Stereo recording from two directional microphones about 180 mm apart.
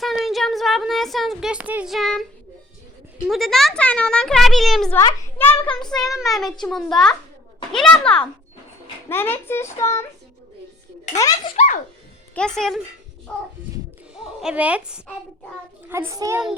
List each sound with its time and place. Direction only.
0.0 s a sound: centre (ahead or behind)
3.2 s a child's voice: centre (ahead or behind)
4.9 s a child's voice: 15° left (ahead or behind)
5.8 s a child's voice: centre (ahead or behind)
11.2 s a child's voice: 20° left (ahead or behind)
11.5 s a child's voice: 45° left (ahead or behind)
12.3 s a child's voice: 5° left (ahead or behind)
14.2 s a child's voice: 5° right (ahead or behind)